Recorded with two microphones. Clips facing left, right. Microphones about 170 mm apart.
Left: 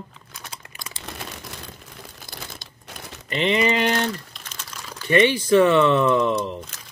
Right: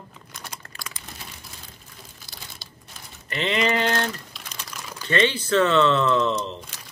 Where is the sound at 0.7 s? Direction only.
25° left (ahead or behind).